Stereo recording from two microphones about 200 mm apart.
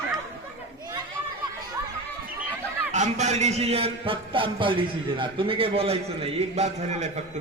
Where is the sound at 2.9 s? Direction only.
35° right (ahead or behind).